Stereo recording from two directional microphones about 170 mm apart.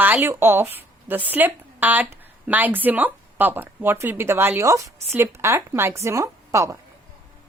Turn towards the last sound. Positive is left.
turn(degrees=-15)  # may be behind; listen again after turning